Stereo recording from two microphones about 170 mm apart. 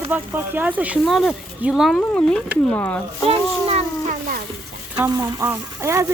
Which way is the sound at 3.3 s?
35° right (ahead or behind).